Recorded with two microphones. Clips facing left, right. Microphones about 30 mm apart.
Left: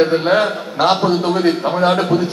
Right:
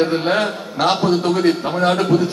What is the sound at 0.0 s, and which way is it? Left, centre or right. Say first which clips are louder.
A man's voice: left 3 dB; centre.